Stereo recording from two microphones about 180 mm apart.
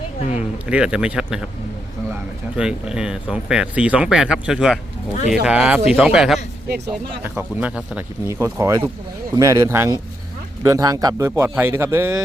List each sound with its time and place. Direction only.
0.2 s a sound: 40° left (ahead or behind)
0.7 s speech: 5° right (ahead or behind)
2.6 s speech: 5° right (ahead or behind)